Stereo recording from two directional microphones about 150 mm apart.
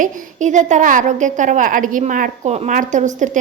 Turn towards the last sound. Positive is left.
turn(degrees=-55)  # may be behind; listen again after turning